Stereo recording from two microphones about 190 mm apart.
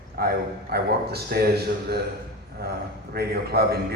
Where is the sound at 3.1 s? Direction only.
55° right (ahead or behind).